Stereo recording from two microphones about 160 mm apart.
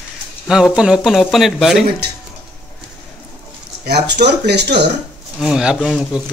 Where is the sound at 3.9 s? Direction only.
90° right.